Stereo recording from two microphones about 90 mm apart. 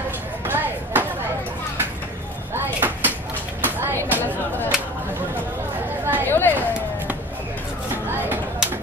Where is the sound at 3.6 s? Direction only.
25° right (ahead or behind).